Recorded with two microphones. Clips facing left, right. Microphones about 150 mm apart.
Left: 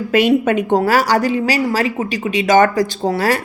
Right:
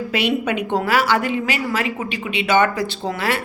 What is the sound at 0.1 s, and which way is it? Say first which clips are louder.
A woman's voice: left 8 dB; 45° left (ahead or behind).